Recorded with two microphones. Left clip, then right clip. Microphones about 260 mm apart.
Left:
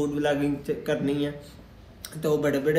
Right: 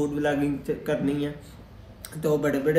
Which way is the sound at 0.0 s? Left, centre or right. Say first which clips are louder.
Even; centre.